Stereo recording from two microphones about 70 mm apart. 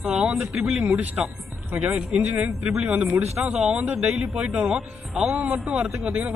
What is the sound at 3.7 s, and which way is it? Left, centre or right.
A man's voice, centre.